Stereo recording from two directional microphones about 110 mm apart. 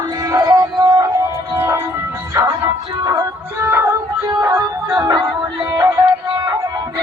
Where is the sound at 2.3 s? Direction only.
35° right (ahead or behind).